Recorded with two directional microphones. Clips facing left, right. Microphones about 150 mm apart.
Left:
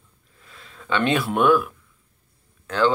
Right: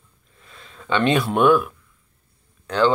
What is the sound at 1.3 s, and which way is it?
Speech, 5° left (ahead or behind).